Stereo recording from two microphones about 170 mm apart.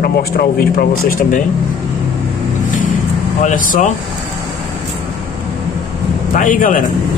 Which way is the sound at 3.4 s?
50° left (ahead or behind).